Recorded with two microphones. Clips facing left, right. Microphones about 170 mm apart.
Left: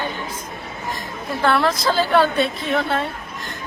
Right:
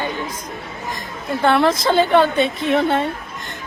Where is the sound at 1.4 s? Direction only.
25° right (ahead or behind).